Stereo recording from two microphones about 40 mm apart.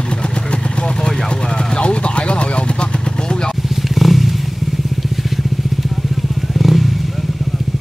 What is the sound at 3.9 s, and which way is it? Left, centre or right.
Wild animals, centre.